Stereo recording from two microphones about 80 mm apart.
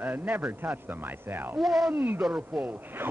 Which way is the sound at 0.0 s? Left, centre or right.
Right.